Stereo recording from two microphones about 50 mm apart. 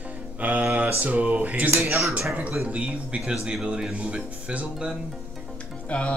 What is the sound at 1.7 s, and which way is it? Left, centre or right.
Speech, right.